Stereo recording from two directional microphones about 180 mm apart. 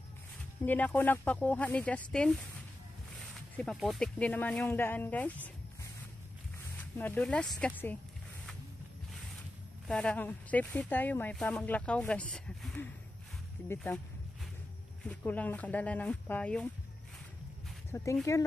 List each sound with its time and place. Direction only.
0.7 s speech: 10° left (ahead or behind)
3.5 s speech: centre (ahead or behind)
6.8 s speech: 10° left (ahead or behind)
9.8 s speech: 5° left (ahead or behind)
15.0 s speech: 10° left (ahead or behind)
17.9 s speech: 15° left (ahead or behind)